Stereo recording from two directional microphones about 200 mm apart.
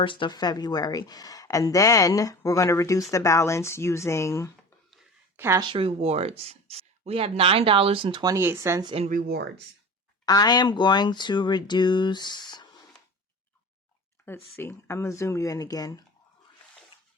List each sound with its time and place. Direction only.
0.0 s speech: 25° left (ahead or behind)
5.4 s speech: 15° right (ahead or behind)
5.6 s speech: 25° right (ahead or behind)
9.0 s speech: 45° right (ahead or behind)
10.2 s speech: 20° left (ahead or behind)
14.3 s speech: 10° left (ahead or behind)